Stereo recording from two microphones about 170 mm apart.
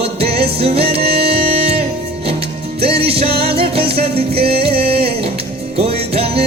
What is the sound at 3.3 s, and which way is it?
Music, 35° right (ahead or behind).